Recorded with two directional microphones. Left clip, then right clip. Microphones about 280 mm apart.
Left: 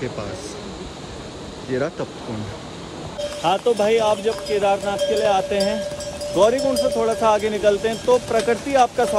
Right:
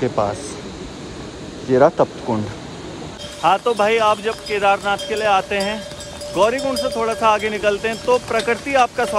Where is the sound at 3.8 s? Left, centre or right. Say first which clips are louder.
Right 2 dB; centre.